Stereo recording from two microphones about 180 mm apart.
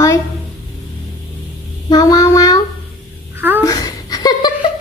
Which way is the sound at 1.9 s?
20° left (ahead or behind).